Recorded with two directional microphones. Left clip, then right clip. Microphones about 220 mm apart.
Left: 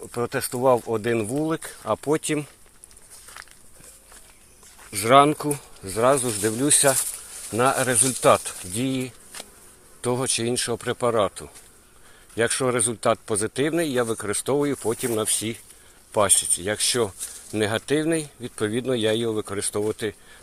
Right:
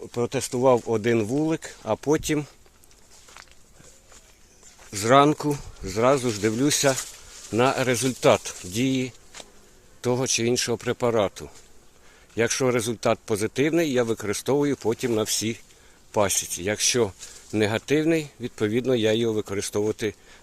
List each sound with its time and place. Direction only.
0.1 s speech: 25° right (ahead or behind)
3.2 s walk: 50° left (ahead or behind)
4.9 s speech: 25° right (ahead or behind)